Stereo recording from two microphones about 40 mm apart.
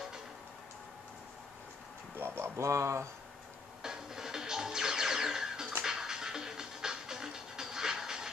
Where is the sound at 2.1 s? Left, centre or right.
Right.